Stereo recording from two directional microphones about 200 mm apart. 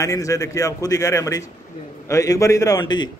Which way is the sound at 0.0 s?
15° left (ahead or behind).